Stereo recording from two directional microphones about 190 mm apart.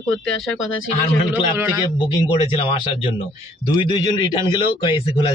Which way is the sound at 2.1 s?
25° left (ahead or behind).